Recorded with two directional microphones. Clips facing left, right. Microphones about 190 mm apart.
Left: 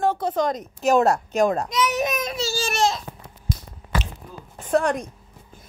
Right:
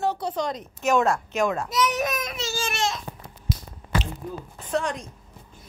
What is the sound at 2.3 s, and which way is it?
Baby cry, 35° left (ahead or behind).